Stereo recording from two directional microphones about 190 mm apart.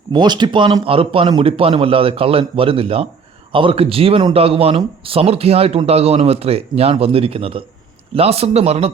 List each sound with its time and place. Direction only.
0.1 s a man's voice: 25° right (ahead or behind)